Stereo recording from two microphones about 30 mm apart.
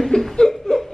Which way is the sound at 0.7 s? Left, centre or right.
Left.